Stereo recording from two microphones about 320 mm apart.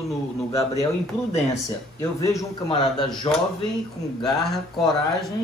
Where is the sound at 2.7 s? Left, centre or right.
Centre.